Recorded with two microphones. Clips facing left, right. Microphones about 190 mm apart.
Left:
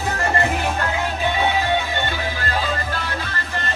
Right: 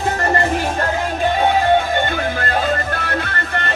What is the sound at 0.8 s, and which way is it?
Music, 45° right (ahead or behind).